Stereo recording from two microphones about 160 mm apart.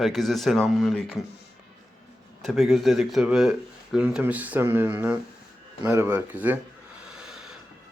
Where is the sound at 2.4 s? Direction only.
Centre (ahead or behind).